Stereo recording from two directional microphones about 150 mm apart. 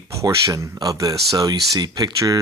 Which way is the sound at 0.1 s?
20° right (ahead or behind).